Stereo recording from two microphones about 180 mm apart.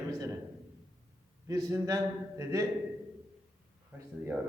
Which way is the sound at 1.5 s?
20° right (ahead or behind).